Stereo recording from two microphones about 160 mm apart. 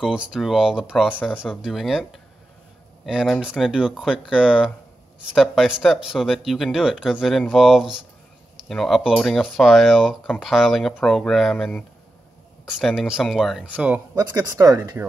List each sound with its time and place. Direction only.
0.0 s speech: 5° right (ahead or behind)
3.1 s speech: 5° right (ahead or behind)
14.1 s speech: 25° right (ahead or behind)